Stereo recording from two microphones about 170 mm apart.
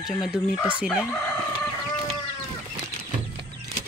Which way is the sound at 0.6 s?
10° right (ahead or behind).